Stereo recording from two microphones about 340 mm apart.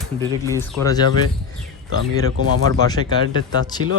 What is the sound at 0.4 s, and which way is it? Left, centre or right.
Speech, centre.